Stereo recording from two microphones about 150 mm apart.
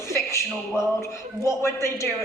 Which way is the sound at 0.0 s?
20° left (ahead or behind).